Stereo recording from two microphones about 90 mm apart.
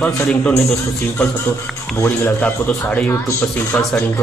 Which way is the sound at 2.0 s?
15° left (ahead or behind).